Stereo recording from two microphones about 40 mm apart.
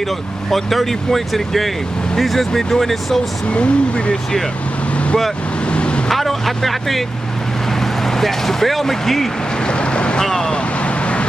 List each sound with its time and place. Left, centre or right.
0.5 s speech: centre
3.4 s speech: left
5.7 s vehicle: left
6.0 s vehicle: centre
8.2 s speech: centre
9.7 s vehicle: left
10.2 s vehicle: centre